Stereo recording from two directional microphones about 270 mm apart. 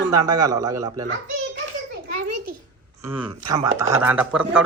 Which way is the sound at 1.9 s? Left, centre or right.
Right.